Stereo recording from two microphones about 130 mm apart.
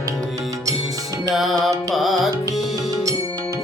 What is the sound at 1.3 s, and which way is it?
Music, centre (ahead or behind).